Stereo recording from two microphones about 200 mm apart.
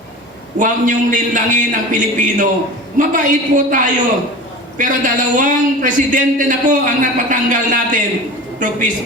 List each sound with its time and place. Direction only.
0.6 s a man's voice: 40° right (ahead or behind)
4.8 s a man's voice: 40° right (ahead or behind)